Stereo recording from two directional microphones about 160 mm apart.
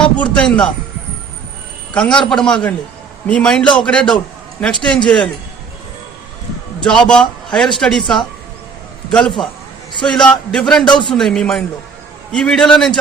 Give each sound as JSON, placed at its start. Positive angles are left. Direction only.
{"t": 0.0, "sound": "a man's voice", "side_deg": 5}
{"t": 1.9, "sound": "a man's voice", "side_deg": 5}
{"t": 6.8, "sound": "a man's voice", "side_deg": 5}
{"t": 10.8, "sound": "a man's voice", "side_deg": 30}
{"t": 11.1, "sound": "a man's voice", "side_deg": 5}